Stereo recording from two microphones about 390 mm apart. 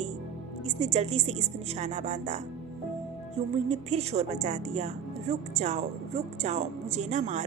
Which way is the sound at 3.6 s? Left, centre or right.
Centre.